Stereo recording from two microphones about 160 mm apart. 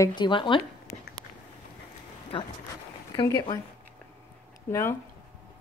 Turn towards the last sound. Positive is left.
turn(degrees=15)  # may be behind; listen again after turning